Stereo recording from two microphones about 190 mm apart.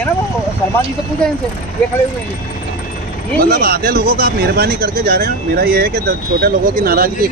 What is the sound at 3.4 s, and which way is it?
Speech, 50° right (ahead or behind).